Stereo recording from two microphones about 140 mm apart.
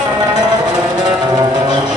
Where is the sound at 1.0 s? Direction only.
30° right (ahead or behind).